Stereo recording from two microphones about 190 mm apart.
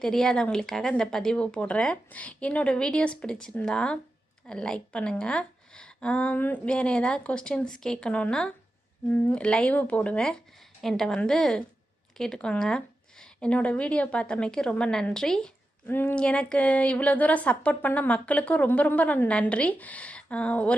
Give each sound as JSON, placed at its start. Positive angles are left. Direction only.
{"t": 0.0, "sound": "a woman's voice", "side_deg": 5}